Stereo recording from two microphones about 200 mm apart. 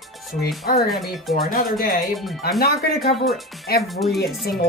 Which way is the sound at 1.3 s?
45° left (ahead or behind).